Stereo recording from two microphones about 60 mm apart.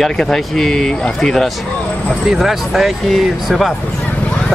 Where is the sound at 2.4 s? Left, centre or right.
Centre.